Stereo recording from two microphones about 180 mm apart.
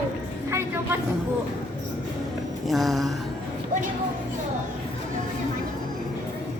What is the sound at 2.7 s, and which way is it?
Speech, centre (ahead or behind).